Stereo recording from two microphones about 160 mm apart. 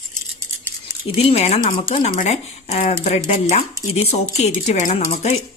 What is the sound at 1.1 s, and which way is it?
A woman's voice, 40° left (ahead or behind).